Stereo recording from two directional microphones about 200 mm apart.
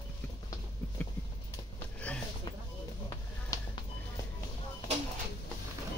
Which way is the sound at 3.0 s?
20° left (ahead or behind).